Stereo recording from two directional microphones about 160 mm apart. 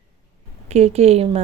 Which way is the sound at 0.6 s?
40° right (ahead or behind).